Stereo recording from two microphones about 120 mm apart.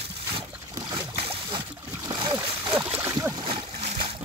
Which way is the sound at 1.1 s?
55° right (ahead or behind).